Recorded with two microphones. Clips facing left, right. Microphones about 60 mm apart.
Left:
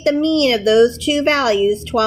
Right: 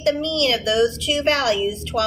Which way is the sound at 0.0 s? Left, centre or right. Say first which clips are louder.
Left 6 dB; left.